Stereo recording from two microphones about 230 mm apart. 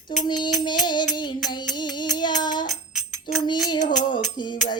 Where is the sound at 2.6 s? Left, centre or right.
Centre.